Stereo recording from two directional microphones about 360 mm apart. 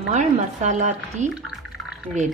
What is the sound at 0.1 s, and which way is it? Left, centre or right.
Speech, centre.